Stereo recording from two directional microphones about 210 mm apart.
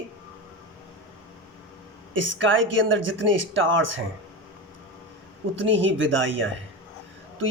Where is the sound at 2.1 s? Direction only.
65° right (ahead or behind).